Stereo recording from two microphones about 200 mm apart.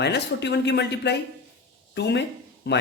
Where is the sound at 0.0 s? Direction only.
60° left (ahead or behind).